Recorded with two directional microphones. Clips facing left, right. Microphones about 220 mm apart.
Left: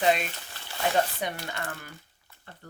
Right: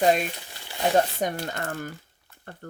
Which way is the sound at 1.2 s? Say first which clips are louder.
Right 5 dB; 45° right (ahead or behind).